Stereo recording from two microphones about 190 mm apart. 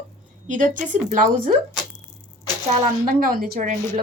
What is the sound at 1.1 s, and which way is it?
Speech, 45° right (ahead or behind).